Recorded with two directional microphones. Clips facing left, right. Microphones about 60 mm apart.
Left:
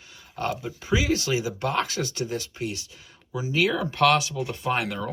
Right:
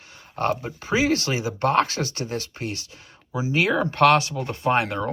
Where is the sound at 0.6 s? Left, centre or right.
Right.